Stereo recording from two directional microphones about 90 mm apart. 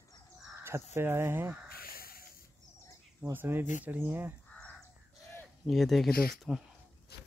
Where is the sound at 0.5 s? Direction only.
30° right (ahead or behind).